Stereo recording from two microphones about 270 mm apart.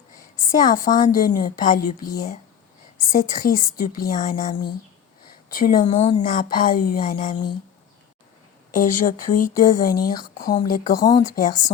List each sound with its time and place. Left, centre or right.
0.5 s speech: left
1.8 s speech: left
3.1 s speech: left
8.7 s speech: left